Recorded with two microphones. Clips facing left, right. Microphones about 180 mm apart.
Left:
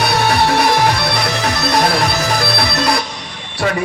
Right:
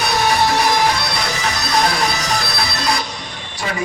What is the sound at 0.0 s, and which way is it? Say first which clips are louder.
Music: left 2 dB; 65° left (ahead or behind).